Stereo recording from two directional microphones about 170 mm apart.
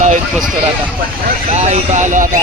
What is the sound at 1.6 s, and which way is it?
Speech, 40° right (ahead or behind).